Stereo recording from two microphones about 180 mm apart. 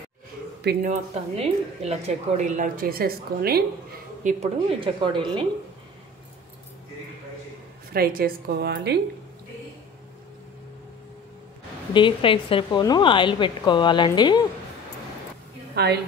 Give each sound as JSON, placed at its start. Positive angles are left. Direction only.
{"t": 0.8, "sound": "speech", "side_deg": -35}
{"t": 4.2, "sound": "a woman's voice", "side_deg": -40}
{"t": 7.9, "sound": "a woman's voice", "side_deg": -55}
{"t": 11.9, "sound": "a woman's voice", "side_deg": 30}
{"t": 15.7, "sound": "a woman's voice", "side_deg": -65}